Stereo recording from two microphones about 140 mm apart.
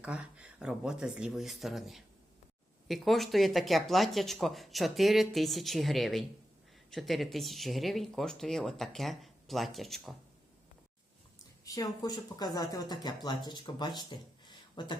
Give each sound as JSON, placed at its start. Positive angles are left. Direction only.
{"t": 0.0, "sound": "speech", "side_deg": -10}
{"t": 11.6, "sound": "speech", "side_deg": 25}